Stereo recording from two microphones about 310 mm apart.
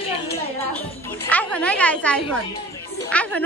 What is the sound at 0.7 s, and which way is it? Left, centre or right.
Music, centre.